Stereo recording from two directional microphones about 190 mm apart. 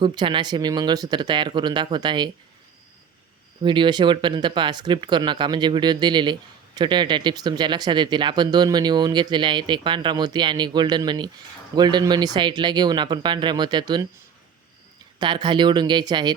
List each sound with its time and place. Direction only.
0.0 s speech: 25° right (ahead or behind)
3.6 s speech: 25° right (ahead or behind)
15.2 s speech: 25° right (ahead or behind)